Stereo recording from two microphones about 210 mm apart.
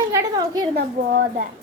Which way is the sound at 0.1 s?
15° right (ahead or behind).